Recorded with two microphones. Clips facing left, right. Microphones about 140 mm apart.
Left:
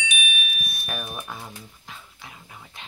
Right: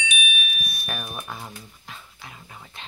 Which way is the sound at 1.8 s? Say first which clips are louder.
Right 1 dB; 15° left (ahead or behind).